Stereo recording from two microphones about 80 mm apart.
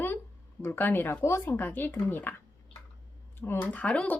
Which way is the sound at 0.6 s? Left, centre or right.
Left.